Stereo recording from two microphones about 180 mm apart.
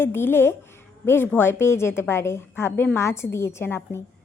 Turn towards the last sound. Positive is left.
turn(degrees=15)  # may be behind; listen again after turning